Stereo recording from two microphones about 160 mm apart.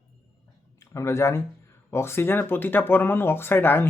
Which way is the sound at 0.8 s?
20° left (ahead or behind).